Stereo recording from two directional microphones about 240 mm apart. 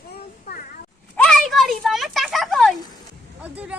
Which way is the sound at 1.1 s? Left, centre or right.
Centre.